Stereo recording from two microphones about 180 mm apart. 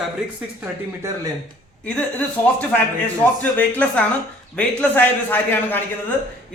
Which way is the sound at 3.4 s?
10° left (ahead or behind).